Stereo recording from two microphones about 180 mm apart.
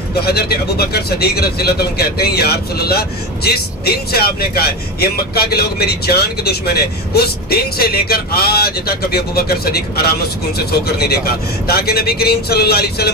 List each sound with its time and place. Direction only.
0.2 s speech: 60° left (ahead or behind)